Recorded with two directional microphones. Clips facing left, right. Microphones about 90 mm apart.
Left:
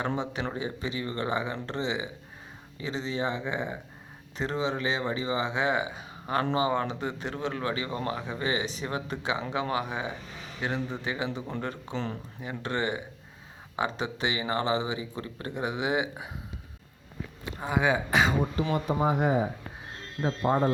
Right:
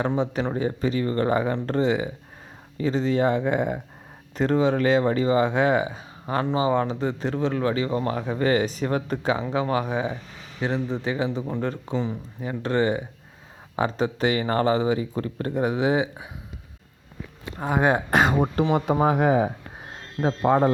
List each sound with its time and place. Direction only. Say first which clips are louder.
0.5 s speech: right 8 dB; 40° right (ahead or behind)
10.8 s a man's voice: right 6 dB; centre (ahead or behind)
11.0 s speech: right 6 dB; 35° right (ahead or behind)
17.6 s speech: right 5 dB; 45° right (ahead or behind)
18.7 s speech: right 4 dB; 85° right
20.2 s speech: right 6 dB; 75° right (ahead or behind)